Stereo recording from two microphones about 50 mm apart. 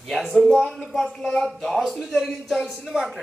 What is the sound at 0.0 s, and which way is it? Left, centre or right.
A man's voice, centre.